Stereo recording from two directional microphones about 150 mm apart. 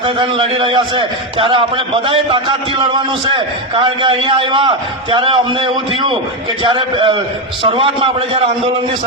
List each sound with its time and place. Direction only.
0.0 s a man's voice: 35° right (ahead or behind)